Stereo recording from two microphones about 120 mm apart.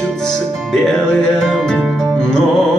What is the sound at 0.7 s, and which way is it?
Music, 5° left (ahead or behind).